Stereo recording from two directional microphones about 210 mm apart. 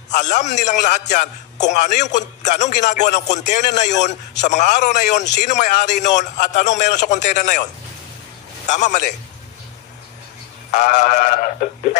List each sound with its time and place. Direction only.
0.1 s a man's voice: 35° left (ahead or behind)
8.6 s a man's voice: 35° left (ahead or behind)
10.7 s a man's voice: 35° left (ahead or behind)